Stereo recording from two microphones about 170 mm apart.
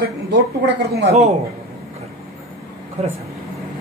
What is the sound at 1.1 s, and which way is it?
Speech, 40° right (ahead or behind).